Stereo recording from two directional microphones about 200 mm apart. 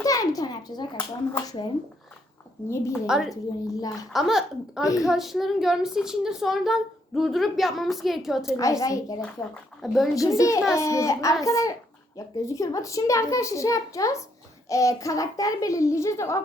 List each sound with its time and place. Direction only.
0.0 s a child's voice: 15° left (ahead or behind)
2.9 s a woman's voice: centre (ahead or behind)
3.7 s a child's voice: 20° left (ahead or behind)
4.1 s a woman's voice: centre (ahead or behind)
8.4 s a child's voice: 15° left (ahead or behind)
9.8 s a woman's voice: centre (ahead or behind)
10.2 s a child's voice: 15° left (ahead or behind)